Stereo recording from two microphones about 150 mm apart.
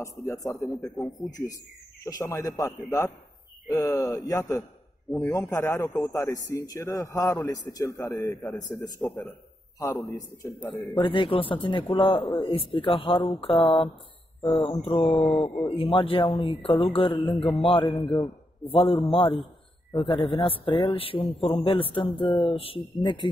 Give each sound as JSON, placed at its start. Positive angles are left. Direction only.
{"t": 0.0, "sound": "a man's voice", "side_deg": 20}
{"t": 0.7, "sound": "speech", "side_deg": 0}
{"t": 2.0, "sound": "a man's voice", "side_deg": 20}
{"t": 5.1, "sound": "speech", "side_deg": 0}
{"t": 5.5, "sound": "a man's voice", "side_deg": 20}
{"t": 8.4, "sound": "a man's voice", "side_deg": 0}
{"t": 9.8, "sound": "a man's voice", "side_deg": 20}
{"t": 10.6, "sound": "a man's voice", "side_deg": 10}
{"t": 11.0, "sound": "a man's voice", "side_deg": 35}
{"t": 14.4, "sound": "speech", "side_deg": 0}
{"t": 15.7, "sound": "a man's voice", "side_deg": 35}
{"t": 17.4, "sound": "speech", "side_deg": 0}
{"t": 17.6, "sound": "a man's voice", "side_deg": 30}